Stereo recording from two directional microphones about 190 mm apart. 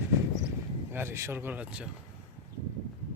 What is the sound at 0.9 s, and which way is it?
Speech, 10° right (ahead or behind).